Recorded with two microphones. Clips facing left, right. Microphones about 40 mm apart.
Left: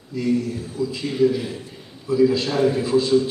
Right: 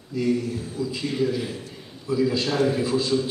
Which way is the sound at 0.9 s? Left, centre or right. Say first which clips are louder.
Left 6 dB; centre.